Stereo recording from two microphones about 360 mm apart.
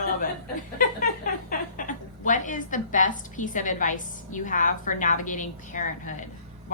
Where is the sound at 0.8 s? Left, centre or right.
Left.